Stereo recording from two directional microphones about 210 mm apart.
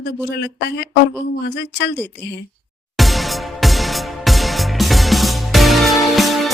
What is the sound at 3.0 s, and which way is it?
Music, centre (ahead or behind).